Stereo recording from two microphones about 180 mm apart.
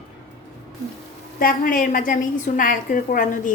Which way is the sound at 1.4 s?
50° left (ahead or behind).